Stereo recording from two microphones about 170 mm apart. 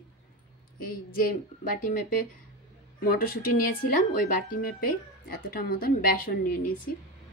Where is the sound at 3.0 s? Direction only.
60° left (ahead or behind).